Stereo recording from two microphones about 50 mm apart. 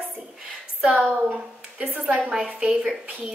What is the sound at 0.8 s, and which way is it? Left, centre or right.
Speech, centre.